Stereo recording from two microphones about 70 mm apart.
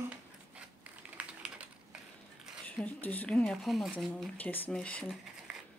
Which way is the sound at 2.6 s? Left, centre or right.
Left.